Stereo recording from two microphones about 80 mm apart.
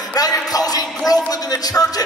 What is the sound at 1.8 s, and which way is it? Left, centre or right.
Music, left.